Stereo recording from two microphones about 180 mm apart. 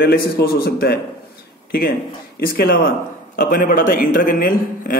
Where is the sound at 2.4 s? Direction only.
55° left (ahead or behind).